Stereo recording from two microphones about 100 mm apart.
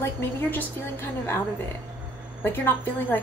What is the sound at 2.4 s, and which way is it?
Speech, 20° left (ahead or behind).